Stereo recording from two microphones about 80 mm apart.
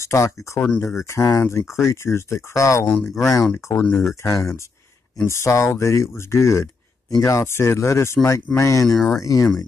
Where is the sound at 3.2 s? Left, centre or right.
Left.